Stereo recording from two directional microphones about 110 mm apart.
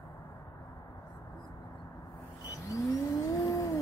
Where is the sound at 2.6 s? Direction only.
30° left (ahead or behind).